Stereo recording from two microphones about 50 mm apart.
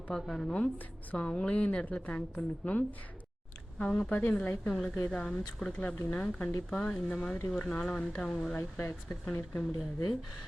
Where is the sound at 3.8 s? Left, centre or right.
Left.